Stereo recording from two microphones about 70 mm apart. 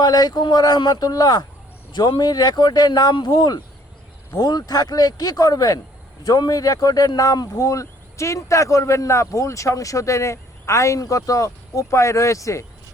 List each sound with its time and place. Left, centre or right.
0.0 s speech: left
1.9 s speech: left
4.4 s speech: left